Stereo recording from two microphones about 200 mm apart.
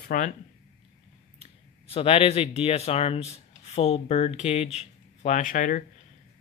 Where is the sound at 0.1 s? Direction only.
45° left (ahead or behind).